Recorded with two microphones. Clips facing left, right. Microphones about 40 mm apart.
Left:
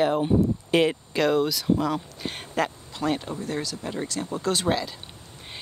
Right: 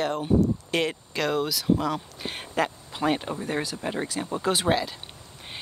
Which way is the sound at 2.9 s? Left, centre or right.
Centre.